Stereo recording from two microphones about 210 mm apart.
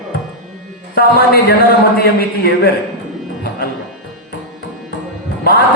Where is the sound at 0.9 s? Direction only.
45° left (ahead or behind).